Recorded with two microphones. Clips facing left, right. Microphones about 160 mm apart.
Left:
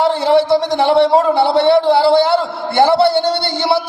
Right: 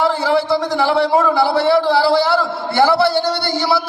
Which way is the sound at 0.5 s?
25° left (ahead or behind).